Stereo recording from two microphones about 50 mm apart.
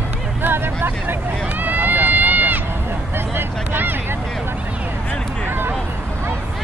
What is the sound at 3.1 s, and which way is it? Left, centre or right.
Vehicle, right.